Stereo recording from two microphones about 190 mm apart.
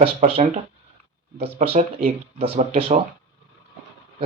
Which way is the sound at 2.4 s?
30° right (ahead or behind).